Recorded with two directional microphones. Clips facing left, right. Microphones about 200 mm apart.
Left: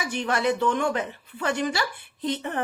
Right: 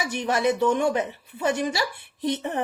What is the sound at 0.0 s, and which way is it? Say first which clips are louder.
Speech: right 2 dB; 20° right (ahead or behind).